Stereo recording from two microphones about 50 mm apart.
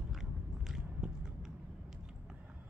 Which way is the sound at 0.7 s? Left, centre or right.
Centre.